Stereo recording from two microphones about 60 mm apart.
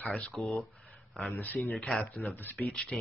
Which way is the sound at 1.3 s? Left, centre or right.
Left.